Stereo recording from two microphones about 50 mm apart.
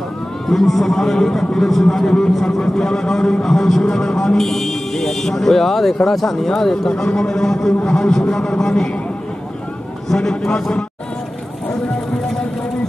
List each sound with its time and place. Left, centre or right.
0.5 s a man's voice: centre
10.1 s a man's voice: centre
11.7 s a sound: centre